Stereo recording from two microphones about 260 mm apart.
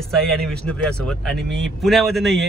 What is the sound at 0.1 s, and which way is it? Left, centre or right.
Speech, centre.